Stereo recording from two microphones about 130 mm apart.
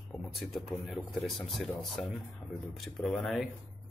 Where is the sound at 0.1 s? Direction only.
Centre (ahead or behind).